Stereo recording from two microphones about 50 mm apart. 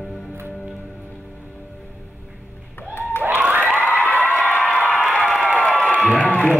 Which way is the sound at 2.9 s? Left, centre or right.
Left.